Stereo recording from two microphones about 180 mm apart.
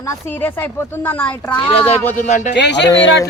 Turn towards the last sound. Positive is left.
turn(degrees=75)  # may be behind; listen again after turning